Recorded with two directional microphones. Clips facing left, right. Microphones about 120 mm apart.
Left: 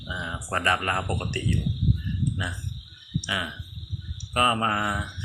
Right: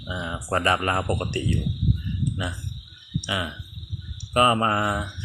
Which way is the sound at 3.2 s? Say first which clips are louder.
Right 3 dB; 25° right (ahead or behind).